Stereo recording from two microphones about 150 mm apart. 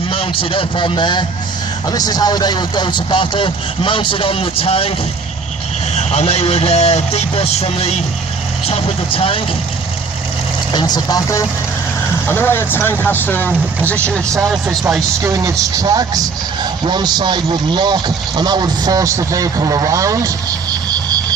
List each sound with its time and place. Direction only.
0.1 s a man's voice: 40° left (ahead or behind)
10.7 s speech: 30° left (ahead or behind); by 14.4 s 10° left (ahead or behind)
14.5 s a man's voice: 5° right (ahead or behind)
15.2 s speech: 20° right (ahead or behind)